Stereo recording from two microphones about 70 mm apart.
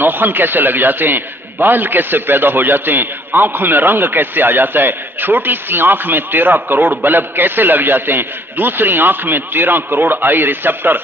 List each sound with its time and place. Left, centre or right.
0.0 s a man's voice: right